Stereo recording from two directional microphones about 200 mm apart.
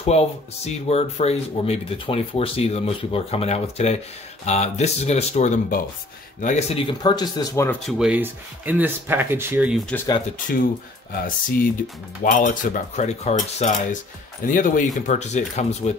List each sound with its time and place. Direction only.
0.0 s speech: 30° left (ahead or behind)
6.9 s speech: 20° left (ahead or behind)
8.0 s speech: 5° right (ahead or behind)
10.5 s speech: 45° left (ahead or behind)
14.4 s speech: 45° left (ahead or behind)